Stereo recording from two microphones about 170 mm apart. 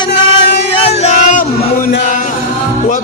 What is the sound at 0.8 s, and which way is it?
Music, 40° left (ahead or behind).